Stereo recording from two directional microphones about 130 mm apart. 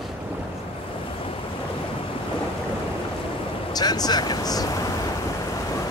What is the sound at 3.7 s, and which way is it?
Speech, 30° left (ahead or behind).